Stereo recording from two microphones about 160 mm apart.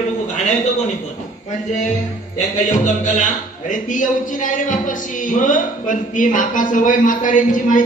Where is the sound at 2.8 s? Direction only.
50° left (ahead or behind).